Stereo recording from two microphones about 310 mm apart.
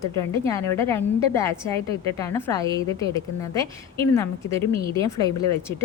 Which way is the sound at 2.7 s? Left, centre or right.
Centre.